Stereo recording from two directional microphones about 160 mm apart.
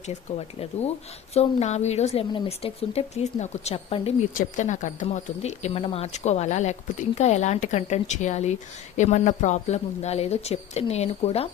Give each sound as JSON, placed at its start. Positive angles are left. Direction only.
{"t": 0.1, "sound": "speech", "side_deg": 40}
{"t": 4.4, "sound": "speech", "side_deg": 50}